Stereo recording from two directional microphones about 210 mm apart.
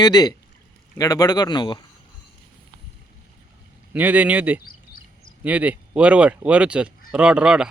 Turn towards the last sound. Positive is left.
turn(degrees=-5)  # may be behind; listen again after turning